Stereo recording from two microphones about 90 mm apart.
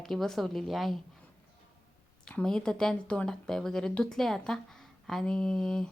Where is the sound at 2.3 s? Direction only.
5° left (ahead or behind).